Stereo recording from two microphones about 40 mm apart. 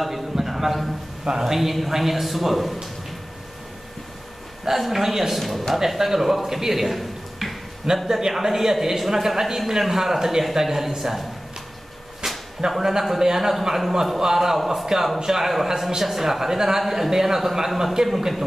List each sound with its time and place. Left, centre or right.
0.0 s a man's voice: centre
4.6 s a man's voice: centre
8.1 s a man's voice: centre
12.7 s a man's voice: centre